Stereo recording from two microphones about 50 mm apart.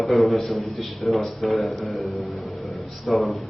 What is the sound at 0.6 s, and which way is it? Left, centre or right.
Speech, left.